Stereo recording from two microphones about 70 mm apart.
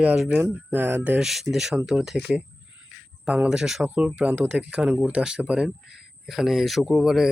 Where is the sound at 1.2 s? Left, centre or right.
Centre.